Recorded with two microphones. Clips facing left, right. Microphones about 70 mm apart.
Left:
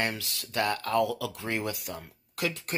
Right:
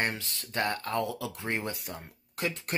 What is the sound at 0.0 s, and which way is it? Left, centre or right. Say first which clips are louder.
Speech: left 1 dB; right.